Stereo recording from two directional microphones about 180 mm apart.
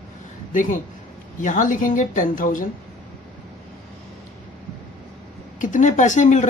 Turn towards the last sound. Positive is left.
turn(degrees=40)  # may be behind; listen again after turning